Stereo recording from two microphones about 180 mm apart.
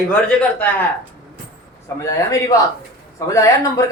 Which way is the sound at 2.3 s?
20° left (ahead or behind).